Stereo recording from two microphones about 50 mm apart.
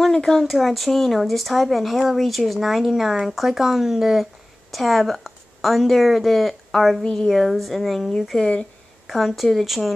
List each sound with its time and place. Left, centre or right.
0.0 s a woman's voice: centre
7.0 s a woman's voice: centre
7.3 s speech: centre
8.4 s speech: centre
9.0 s speech: centre